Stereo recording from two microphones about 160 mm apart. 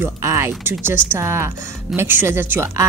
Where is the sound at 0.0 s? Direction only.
15° right (ahead or behind).